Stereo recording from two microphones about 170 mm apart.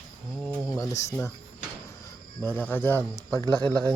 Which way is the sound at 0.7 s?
20° left (ahead or behind).